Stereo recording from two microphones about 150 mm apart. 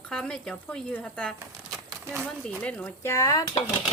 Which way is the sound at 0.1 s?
5° left (ahead or behind).